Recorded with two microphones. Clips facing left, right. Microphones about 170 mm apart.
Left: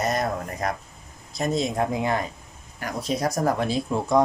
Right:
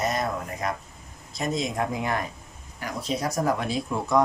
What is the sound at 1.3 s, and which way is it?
Speech, 30° left (ahead or behind).